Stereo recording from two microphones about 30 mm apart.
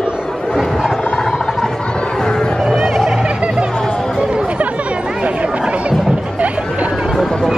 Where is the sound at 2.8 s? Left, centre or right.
Centre.